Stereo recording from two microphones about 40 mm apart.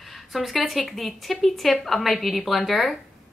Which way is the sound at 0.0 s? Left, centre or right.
Centre.